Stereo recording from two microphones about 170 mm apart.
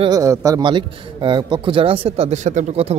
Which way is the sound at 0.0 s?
20° right (ahead or behind).